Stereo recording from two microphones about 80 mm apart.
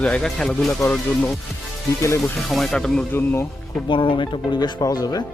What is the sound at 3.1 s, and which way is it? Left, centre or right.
Music, left.